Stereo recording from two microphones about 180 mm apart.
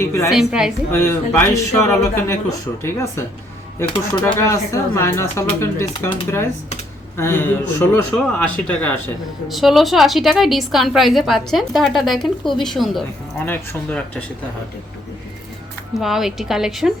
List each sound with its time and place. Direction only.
0.0 s speech: 15° left (ahead or behind)
0.3 s a woman's voice: centre (ahead or behind)
0.9 s speech: 15° left (ahead or behind)
7.2 s a woman's voice: 15° left (ahead or behind)
16.0 s a woman's voice: centre (ahead or behind)